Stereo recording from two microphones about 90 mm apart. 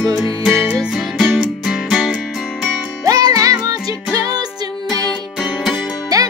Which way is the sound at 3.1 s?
45° right (ahead or behind).